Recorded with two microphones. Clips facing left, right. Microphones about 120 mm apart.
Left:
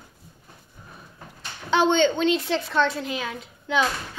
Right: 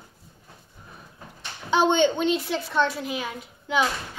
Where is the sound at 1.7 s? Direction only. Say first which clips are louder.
Even; 10° right (ahead or behind).